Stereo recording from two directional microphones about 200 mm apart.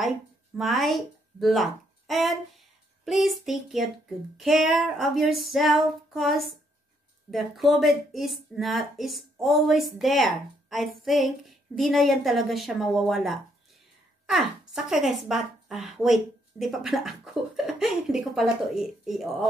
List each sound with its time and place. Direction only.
0.6 s a woman's voice: centre (ahead or behind)
14.7 s a woman's voice: centre (ahead or behind)